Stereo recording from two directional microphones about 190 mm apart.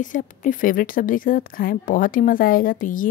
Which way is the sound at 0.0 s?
45° left (ahead or behind).